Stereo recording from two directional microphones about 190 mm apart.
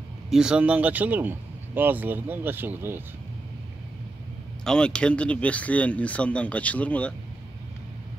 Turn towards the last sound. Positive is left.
turn(degrees=5)  # may be behind; listen again after turning